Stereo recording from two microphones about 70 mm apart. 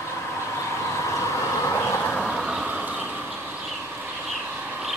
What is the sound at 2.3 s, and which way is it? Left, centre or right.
Vehicle, centre.